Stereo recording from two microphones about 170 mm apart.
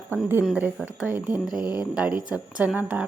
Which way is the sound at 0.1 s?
10° right (ahead or behind).